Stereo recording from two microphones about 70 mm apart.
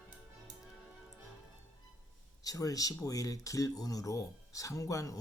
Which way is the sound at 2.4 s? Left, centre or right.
Left.